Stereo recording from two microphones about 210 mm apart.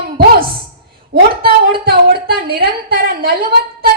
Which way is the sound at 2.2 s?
45° right (ahead or behind).